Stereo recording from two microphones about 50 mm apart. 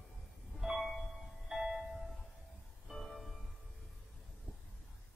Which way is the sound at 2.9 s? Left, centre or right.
Centre.